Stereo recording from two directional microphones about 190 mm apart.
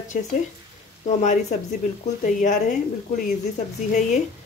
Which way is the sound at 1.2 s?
40° left (ahead or behind).